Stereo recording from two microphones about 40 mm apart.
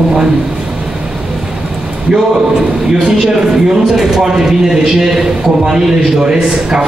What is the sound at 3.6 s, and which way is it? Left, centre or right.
Speech, centre.